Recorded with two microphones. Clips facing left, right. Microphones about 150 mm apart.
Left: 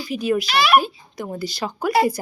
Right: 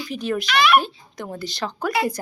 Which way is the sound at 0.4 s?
35° left (ahead or behind).